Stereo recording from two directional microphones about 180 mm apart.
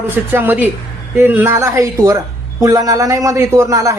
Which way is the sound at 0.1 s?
10° right (ahead or behind).